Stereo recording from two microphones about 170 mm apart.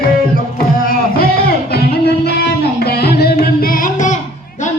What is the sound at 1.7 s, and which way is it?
Music, 70° left (ahead or behind).